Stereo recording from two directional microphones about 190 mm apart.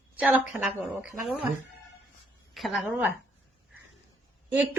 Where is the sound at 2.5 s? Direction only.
Centre (ahead or behind).